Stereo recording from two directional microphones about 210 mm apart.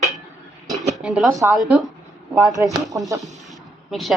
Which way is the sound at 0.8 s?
Centre (ahead or behind).